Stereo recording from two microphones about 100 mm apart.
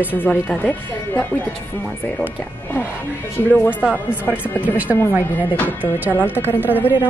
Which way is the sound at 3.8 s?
15° right (ahead or behind).